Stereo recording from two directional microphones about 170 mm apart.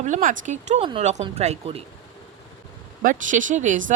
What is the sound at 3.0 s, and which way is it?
Speech, 50° right (ahead or behind).